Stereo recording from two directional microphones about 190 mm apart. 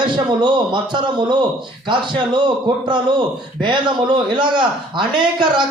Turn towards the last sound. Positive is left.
turn(degrees=-25)  # may be behind; listen again after turning